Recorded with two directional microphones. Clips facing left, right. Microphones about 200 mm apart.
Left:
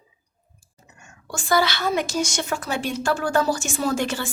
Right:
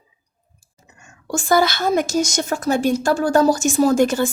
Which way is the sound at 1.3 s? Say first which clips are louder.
Right 5 dB; 45° right (ahead or behind).